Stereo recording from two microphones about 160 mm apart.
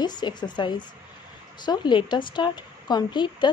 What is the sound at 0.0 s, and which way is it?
A woman's voice, 25° left (ahead or behind).